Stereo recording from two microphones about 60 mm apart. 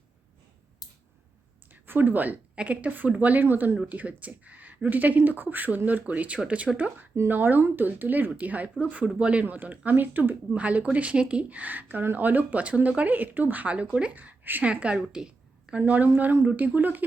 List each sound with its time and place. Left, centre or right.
1.7 s a woman's voice: right
3.8 s a woman's voice: right
10.5 s a woman's voice: right
15.1 s a sound: centre
16.5 s a woman's voice: right